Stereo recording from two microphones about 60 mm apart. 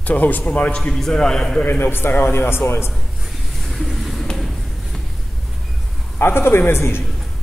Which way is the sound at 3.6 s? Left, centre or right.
Centre.